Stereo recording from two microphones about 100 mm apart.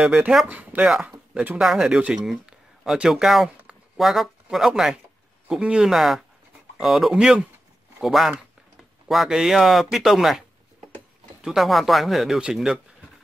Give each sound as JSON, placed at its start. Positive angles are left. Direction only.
{"t": 0.0, "sound": "speech", "side_deg": -10}
{"t": 1.6, "sound": "speech", "side_deg": -5}
{"t": 11.4, "sound": "speech", "side_deg": 0}